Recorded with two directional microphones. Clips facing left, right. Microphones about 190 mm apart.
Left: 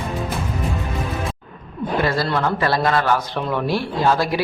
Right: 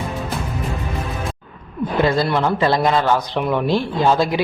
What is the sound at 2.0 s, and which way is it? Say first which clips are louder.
A man's voice: right 4 dB; 20° right (ahead or behind).